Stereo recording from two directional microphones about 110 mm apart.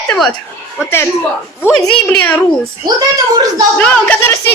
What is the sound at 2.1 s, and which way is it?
Speech, 10° left (ahead or behind).